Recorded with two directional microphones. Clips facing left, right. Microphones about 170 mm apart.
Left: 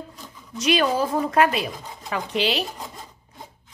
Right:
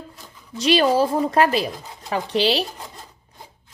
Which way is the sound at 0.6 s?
30° right (ahead or behind).